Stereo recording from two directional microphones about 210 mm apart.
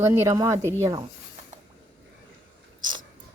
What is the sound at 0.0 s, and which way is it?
Speech, 15° right (ahead or behind).